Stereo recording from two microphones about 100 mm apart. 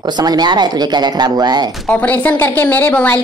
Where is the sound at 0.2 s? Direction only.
45° right (ahead or behind).